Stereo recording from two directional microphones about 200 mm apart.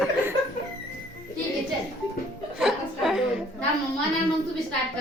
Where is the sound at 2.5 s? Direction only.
Centre (ahead or behind).